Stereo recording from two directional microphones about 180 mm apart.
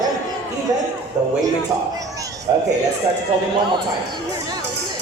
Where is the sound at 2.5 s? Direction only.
20° right (ahead or behind).